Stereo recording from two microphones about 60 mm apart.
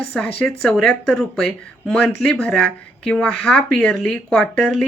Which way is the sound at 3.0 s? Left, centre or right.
Centre.